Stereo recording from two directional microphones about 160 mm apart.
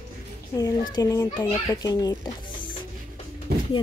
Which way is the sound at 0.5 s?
25° left (ahead or behind).